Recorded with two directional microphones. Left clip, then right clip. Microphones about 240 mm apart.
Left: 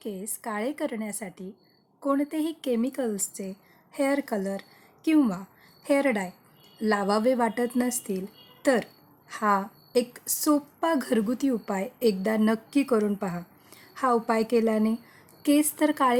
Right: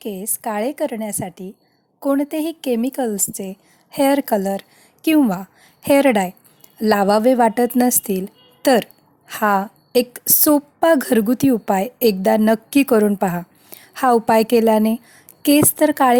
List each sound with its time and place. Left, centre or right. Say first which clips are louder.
0.0 s a woman's voice: right 9 dB; right